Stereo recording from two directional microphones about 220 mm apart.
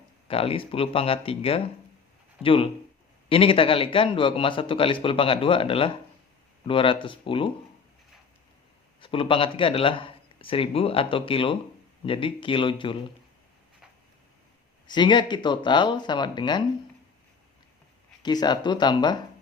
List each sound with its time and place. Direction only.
0.3 s speech: 25° left (ahead or behind)
9.0 s speech: 25° left (ahead or behind)
14.8 s speech: 20° left (ahead or behind)
18.2 s speech: 20° left (ahead or behind)